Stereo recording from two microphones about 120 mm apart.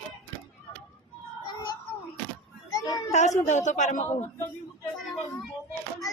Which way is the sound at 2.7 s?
30° left (ahead or behind).